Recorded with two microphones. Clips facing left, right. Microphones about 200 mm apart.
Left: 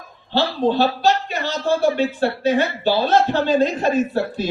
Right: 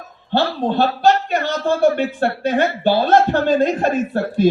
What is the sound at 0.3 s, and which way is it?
Speech, 55° right (ahead or behind).